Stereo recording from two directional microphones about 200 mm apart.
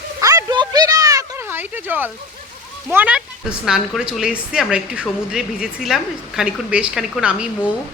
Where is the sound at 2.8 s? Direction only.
5° right (ahead or behind).